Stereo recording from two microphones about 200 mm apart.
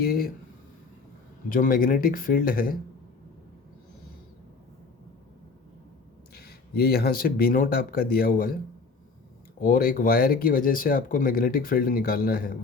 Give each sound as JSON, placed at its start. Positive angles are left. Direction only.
{"t": 0.0, "sound": "speech", "side_deg": 50}
{"t": 1.5, "sound": "speech", "side_deg": 45}
{"t": 6.3, "sound": "speech", "side_deg": 50}
{"t": 9.6, "sound": "speech", "side_deg": 45}